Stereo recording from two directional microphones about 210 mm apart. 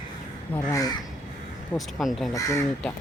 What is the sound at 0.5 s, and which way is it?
Speech, 15° left (ahead or behind).